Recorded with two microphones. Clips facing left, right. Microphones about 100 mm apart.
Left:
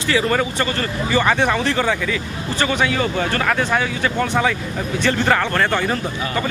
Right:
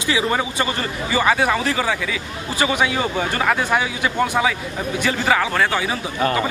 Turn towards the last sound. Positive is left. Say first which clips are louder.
# left 1 dB
turn(degrees=-5)  # may be behind; listen again after turning